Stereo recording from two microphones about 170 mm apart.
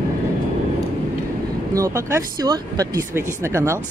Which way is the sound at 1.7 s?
20° right (ahead or behind).